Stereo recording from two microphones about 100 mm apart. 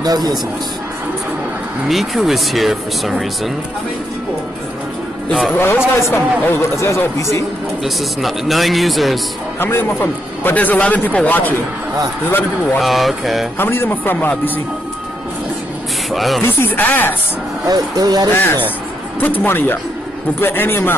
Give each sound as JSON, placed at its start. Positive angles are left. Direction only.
{"t": 0.0, "sound": "a man's voice", "side_deg": -40}
{"t": 1.9, "sound": "speech", "side_deg": 0}
{"t": 5.5, "sound": "speech", "side_deg": 25}
{"t": 7.8, "sound": "speech", "side_deg": 0}
{"t": 9.6, "sound": "a man's voice", "side_deg": 20}
{"t": 12.7, "sound": "speech", "side_deg": 0}
{"t": 13.6, "sound": "speech", "side_deg": 20}
{"t": 16.1, "sound": "speech", "side_deg": 0}
{"t": 16.4, "sound": "speech", "side_deg": 20}
{"t": 17.6, "sound": "speech", "side_deg": -40}
{"t": 18.3, "sound": "speech", "side_deg": 25}